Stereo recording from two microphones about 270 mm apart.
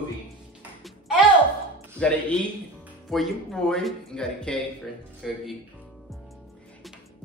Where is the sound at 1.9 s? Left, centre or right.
Centre.